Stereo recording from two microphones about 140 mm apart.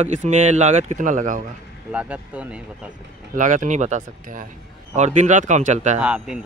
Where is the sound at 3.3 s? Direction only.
65° right (ahead or behind).